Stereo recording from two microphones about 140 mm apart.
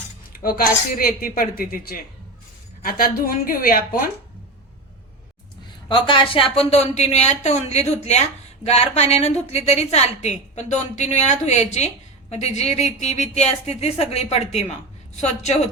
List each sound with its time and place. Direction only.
0.3 s speech: 90° left
5.9 s a woman's voice: 35° left (ahead or behind); by 15.7 s 55° left (ahead or behind)